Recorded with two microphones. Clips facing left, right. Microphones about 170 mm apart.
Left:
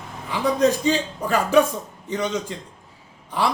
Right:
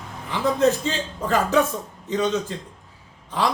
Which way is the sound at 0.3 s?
15° left (ahead or behind).